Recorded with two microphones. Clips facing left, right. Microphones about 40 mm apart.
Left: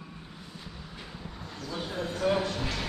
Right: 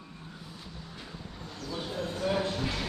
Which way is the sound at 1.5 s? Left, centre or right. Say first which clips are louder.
Left 1 dB; centre.